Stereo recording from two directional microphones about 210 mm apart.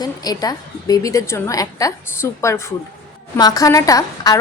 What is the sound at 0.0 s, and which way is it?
A woman's voice, 20° left (ahead or behind).